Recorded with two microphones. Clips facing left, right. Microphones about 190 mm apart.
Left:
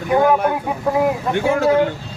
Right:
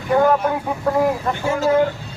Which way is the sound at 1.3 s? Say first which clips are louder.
Left 3 dB; 60° left (ahead or behind).